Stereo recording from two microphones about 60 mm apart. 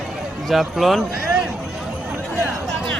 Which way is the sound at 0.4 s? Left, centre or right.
Centre.